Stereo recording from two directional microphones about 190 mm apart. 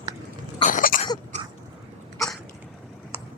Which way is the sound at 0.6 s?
45° left (ahead or behind).